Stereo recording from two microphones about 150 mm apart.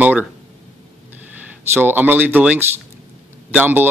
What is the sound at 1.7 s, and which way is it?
Speech, 15° right (ahead or behind).